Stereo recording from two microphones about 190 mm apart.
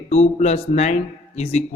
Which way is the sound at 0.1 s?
35° left (ahead or behind).